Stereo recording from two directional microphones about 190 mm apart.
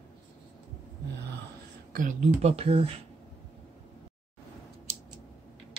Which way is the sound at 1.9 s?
45° right (ahead or behind).